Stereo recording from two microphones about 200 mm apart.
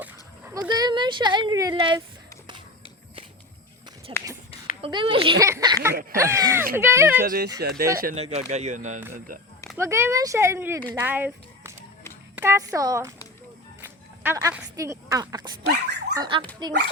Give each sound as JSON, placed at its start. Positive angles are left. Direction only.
{"t": 0.5, "sound": "speech", "side_deg": -20}
{"t": 4.1, "sound": "a sound", "side_deg": -25}
{"t": 4.8, "sound": "speech", "side_deg": -25}
{"t": 7.2, "sound": "speech", "side_deg": -50}
{"t": 8.1, "sound": "speech", "side_deg": -30}
{"t": 9.7, "sound": "speech", "side_deg": -15}
{"t": 14.3, "sound": "speech", "side_deg": -15}
{"t": 15.6, "sound": "dog", "side_deg": -55}
{"t": 16.1, "sound": "speech", "side_deg": -20}